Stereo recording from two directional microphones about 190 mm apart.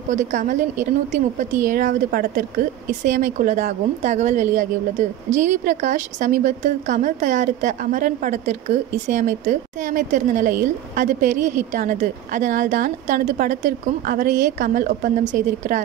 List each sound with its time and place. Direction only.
0.1 s a woman's voice: 40° right (ahead or behind)